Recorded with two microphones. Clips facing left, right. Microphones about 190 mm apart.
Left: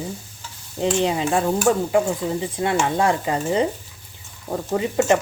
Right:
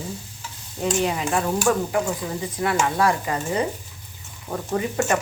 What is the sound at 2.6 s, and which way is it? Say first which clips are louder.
Speech: even; 25° left (ahead or behind).